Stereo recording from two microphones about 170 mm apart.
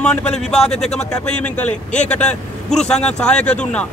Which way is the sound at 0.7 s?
40° left (ahead or behind).